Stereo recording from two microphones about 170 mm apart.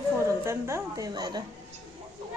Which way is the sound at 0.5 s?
15° right (ahead or behind).